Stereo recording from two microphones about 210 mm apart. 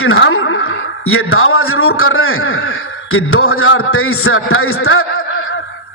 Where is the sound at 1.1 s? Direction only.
85° left.